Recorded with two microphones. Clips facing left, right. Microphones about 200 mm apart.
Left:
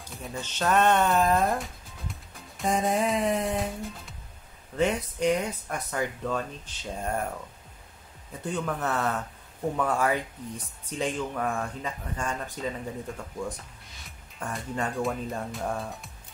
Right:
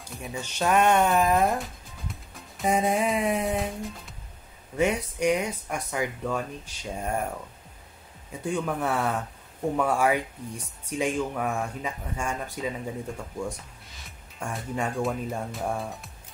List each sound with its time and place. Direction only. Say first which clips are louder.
0.3 s speech: right 1 dB; 10° right (ahead or behind)
1.4 s speech: right 2 dB; centre (ahead or behind)
4.7 s speech: right 1 dB; 10° right (ahead or behind)
8.3 s speech: right 2 dB; 10° right (ahead or behind)
14.4 s speech: right 1 dB; 5° right (ahead or behind)